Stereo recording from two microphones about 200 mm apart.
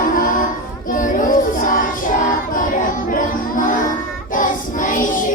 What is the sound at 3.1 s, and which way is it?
Music, 40° left (ahead or behind).